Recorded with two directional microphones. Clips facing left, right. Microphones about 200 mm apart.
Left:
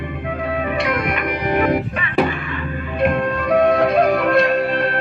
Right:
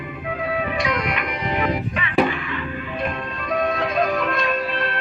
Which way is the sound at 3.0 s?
70° left (ahead or behind).